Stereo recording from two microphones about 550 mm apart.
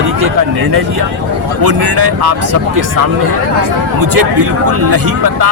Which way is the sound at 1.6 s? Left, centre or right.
Right.